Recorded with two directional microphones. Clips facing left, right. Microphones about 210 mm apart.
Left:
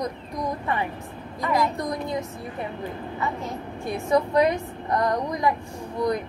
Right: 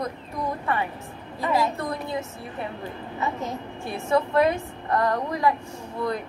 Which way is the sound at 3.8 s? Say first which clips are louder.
Left 1 dB; 15° left (ahead or behind).